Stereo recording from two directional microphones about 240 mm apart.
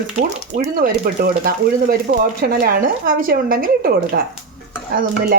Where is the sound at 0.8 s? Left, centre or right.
Right.